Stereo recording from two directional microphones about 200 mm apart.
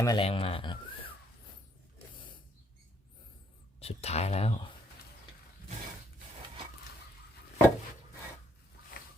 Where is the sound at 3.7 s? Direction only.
30° left (ahead or behind).